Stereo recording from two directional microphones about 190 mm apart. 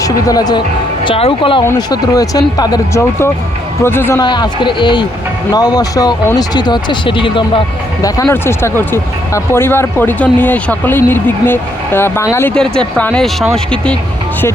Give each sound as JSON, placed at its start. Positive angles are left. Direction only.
{"t": 0.0, "sound": "speech", "side_deg": 20}
{"t": 4.2, "sound": "speech", "side_deg": 25}
{"t": 8.0, "sound": "speech", "side_deg": 15}